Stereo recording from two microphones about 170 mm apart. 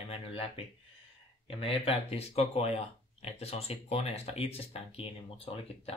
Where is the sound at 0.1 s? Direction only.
35° left (ahead or behind).